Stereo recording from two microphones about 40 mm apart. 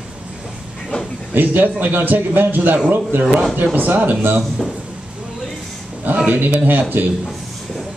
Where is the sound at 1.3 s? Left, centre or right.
Right.